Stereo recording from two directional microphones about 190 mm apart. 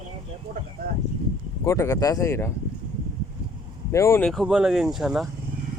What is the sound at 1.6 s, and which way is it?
Speech, 15° left (ahead or behind).